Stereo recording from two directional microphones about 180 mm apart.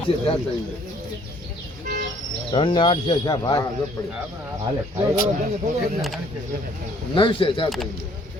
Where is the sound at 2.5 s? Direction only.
25° left (ahead or behind).